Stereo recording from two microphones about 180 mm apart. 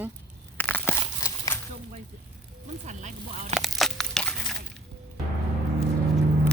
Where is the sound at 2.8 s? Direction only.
40° right (ahead or behind).